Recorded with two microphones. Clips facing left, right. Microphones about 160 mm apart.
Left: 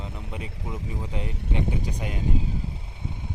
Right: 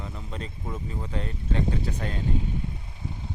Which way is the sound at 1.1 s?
15° left (ahead or behind).